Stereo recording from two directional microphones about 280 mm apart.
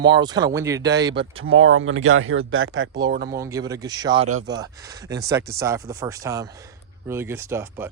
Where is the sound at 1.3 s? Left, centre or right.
Right.